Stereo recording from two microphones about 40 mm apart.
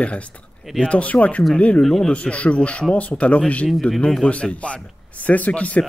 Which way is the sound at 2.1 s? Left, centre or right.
Left.